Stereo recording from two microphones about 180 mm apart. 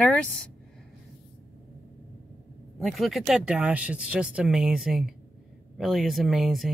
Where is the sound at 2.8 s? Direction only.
Centre (ahead or behind).